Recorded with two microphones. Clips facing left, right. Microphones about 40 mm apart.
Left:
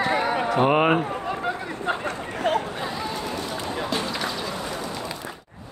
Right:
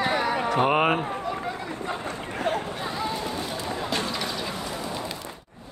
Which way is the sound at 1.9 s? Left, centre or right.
Left.